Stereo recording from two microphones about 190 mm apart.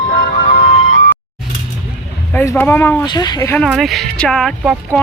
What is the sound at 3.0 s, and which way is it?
Speech, 20° left (ahead or behind).